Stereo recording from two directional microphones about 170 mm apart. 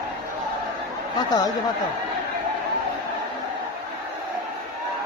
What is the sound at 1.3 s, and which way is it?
Speech, 25° left (ahead or behind).